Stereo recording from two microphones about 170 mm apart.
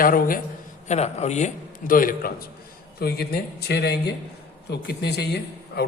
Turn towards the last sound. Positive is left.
turn(degrees=75)  # may be behind; listen again after turning